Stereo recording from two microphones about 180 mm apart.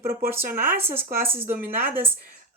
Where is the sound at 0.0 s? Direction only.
55° right (ahead or behind).